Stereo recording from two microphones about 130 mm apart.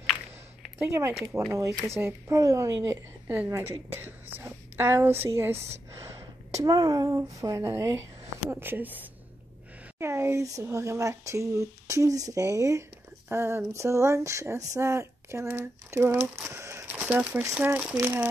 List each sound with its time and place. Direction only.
0.7 s a woman's voice: 15° right (ahead or behind)
16.4 s a sound: 20° right (ahead or behind)
17.0 s speech: 10° right (ahead or behind)